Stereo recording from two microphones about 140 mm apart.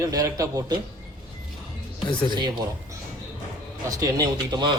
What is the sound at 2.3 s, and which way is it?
Speech, 30° right (ahead or behind).